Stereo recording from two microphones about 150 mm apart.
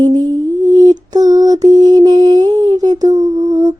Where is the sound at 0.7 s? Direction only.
25° right (ahead or behind).